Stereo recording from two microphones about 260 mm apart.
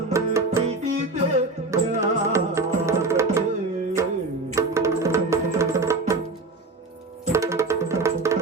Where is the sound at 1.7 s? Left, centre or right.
Centre.